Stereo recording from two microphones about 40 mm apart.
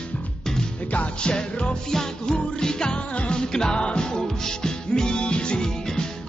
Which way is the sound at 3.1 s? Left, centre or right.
Left.